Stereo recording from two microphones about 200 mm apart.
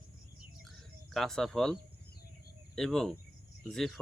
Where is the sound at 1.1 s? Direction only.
Centre (ahead or behind).